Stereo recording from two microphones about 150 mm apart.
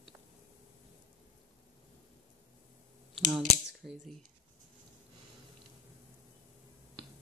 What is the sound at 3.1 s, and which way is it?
Speech, centre (ahead or behind).